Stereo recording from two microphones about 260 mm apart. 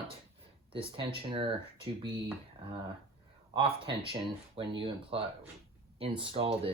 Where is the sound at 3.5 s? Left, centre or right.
Right.